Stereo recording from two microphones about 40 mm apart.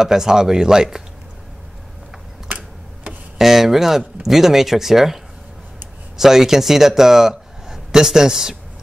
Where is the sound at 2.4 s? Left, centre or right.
Right.